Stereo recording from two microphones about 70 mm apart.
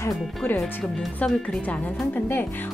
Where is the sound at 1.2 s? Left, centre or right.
Centre.